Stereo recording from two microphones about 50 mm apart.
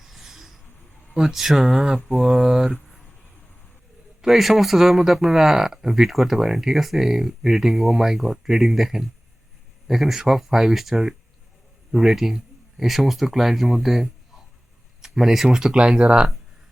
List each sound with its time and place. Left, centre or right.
0.0 s a sound: centre
1.1 s speech: centre
4.2 s speech: centre